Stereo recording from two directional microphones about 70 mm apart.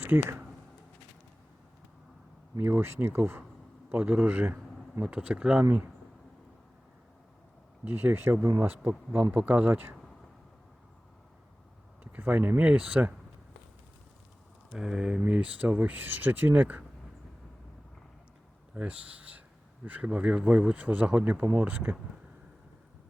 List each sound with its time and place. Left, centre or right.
0.0 s speech: right
2.6 s speech: right; by 5.6 s centre
7.9 s speech: right
9.3 s speech: right
12.1 s speech: right
14.7 s speech: centre; by 16.8 s right
18.7 s speech: centre
21.4 s speech: right